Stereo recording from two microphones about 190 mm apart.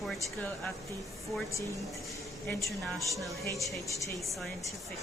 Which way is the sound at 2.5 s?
15° left (ahead or behind).